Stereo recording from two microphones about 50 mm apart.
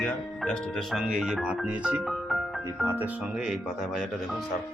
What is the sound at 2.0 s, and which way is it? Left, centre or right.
Music, centre.